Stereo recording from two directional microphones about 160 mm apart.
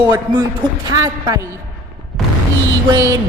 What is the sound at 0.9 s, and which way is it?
Speech, 25° right (ahead or behind).